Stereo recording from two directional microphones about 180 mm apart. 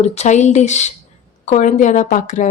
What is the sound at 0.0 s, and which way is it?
Speech, 35° left (ahead or behind).